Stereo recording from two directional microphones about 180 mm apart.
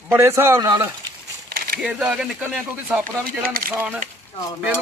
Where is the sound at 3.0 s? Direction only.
50° right (ahead or behind).